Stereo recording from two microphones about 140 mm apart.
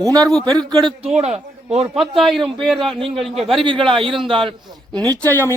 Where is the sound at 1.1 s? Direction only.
50° right (ahead or behind).